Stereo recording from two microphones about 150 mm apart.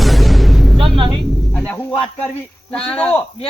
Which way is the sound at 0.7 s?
35° right (ahead or behind).